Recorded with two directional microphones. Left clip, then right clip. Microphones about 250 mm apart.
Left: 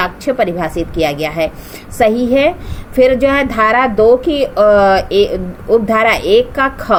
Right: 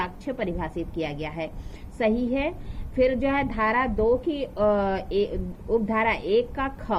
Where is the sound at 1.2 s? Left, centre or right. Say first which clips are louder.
Left 16 dB; centre.